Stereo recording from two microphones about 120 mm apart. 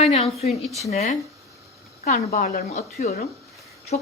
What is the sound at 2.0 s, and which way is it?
A woman's voice, 80° left.